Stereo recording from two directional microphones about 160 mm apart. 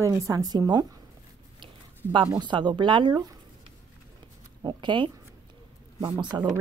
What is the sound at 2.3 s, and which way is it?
Speech, 30° right (ahead or behind).